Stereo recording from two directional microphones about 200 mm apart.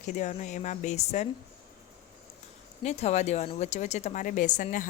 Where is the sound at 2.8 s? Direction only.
35° left (ahead or behind).